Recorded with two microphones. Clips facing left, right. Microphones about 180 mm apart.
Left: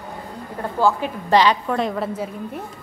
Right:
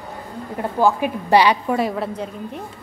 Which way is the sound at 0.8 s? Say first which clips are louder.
Right 2 dB; 15° right (ahead or behind).